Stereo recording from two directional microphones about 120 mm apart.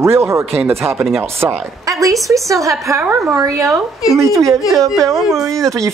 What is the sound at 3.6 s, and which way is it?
Speech, centre (ahead or behind).